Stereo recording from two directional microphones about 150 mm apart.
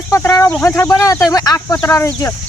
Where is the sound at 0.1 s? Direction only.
20° left (ahead or behind).